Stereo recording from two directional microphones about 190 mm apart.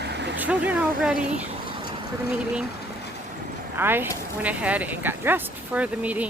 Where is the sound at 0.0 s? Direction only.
65° right (ahead or behind).